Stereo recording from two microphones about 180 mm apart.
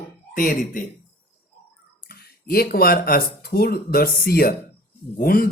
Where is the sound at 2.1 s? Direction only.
60° left (ahead or behind).